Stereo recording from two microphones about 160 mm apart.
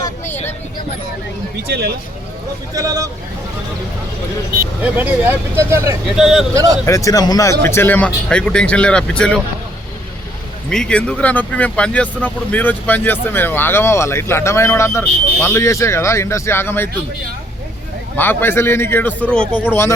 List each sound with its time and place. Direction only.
1.6 s speech: 90° right
2.7 s speech: 20° right (ahead or behind)
4.8 s speech: 10° right (ahead or behind)
6.1 s speech: 5° right (ahead or behind)
6.5 s speech: 20° right (ahead or behind)
6.8 s speech: 20° left (ahead or behind)
10.7 s speech: 5° left (ahead or behind)
18.2 s speech: 15° left (ahead or behind)